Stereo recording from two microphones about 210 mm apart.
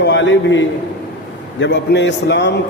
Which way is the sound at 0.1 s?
60° left (ahead or behind).